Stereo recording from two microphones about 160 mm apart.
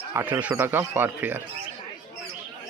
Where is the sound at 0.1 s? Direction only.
10° right (ahead or behind).